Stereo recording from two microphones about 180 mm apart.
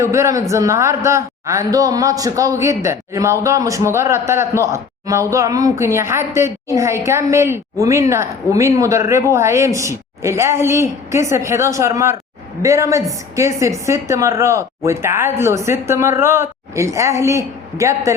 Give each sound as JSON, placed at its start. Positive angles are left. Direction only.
{"t": 0.0, "sound": "a man's voice", "side_deg": -15}